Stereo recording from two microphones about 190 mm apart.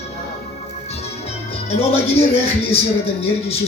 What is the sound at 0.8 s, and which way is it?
Music, 35° left (ahead or behind).